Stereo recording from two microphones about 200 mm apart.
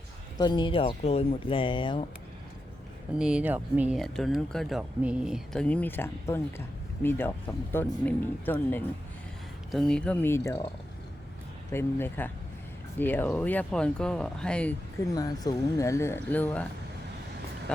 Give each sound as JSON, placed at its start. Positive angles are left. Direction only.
{"t": 0.3, "sound": "speech", "side_deg": 20}
{"t": 3.2, "sound": "speech", "side_deg": -5}
{"t": 11.7, "sound": "speech", "side_deg": 10}
{"t": 15.1, "sound": "speech", "side_deg": 20}